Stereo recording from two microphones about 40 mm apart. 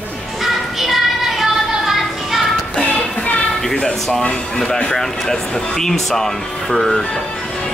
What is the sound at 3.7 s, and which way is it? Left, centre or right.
Speech, left.